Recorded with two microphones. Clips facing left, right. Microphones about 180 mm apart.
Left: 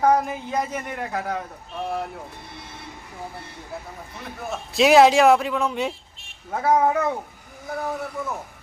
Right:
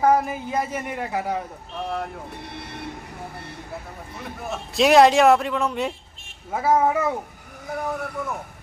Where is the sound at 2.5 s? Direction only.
65° right (ahead or behind).